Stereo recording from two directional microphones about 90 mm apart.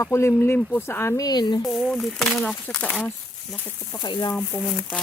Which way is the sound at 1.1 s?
45° left (ahead or behind).